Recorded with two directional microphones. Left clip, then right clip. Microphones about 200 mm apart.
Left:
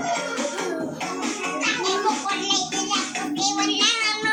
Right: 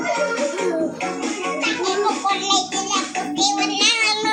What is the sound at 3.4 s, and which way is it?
Child singing, 15° right (ahead or behind).